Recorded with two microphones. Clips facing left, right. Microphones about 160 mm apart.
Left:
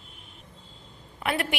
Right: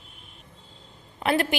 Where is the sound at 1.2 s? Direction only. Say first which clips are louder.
Right 5 dB; 35° right (ahead or behind).